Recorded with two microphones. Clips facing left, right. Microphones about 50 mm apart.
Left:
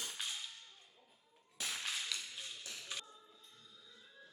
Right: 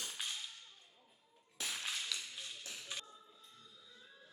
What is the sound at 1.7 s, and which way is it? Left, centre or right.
Whip, centre.